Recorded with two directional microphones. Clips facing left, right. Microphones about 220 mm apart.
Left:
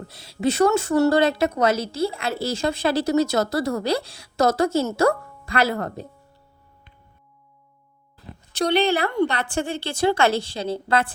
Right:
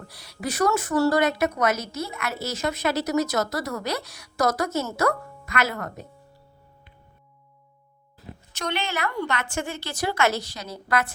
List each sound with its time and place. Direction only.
0.1 s a woman's voice: 25° left (ahead or behind)
8.5 s a woman's voice: 35° left (ahead or behind)